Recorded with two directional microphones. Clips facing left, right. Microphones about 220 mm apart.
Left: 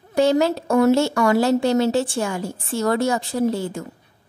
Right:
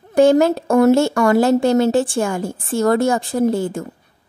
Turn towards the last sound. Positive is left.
turn(degrees=-50)  # may be behind; listen again after turning